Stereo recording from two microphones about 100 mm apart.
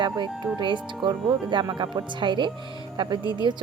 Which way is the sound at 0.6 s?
55° right (ahead or behind).